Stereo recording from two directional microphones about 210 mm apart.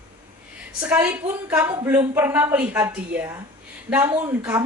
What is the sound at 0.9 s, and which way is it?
A woman's voice, 10° right (ahead or behind).